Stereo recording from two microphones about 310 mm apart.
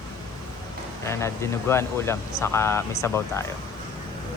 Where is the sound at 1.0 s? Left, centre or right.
Centre.